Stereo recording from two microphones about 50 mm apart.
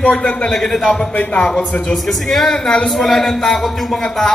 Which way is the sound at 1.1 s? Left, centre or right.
Left.